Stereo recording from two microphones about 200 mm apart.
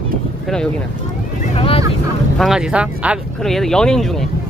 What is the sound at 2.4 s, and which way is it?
Speech, centre (ahead or behind).